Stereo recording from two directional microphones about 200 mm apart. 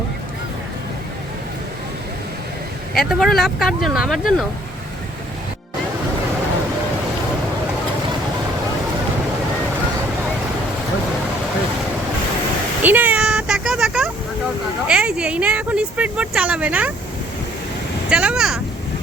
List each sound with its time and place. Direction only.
3.0 s speech: centre (ahead or behind)
12.8 s vehicle: 10° right (ahead or behind)
14.8 s a sound: 5° right (ahead or behind)
18.1 s speech: 5° right (ahead or behind)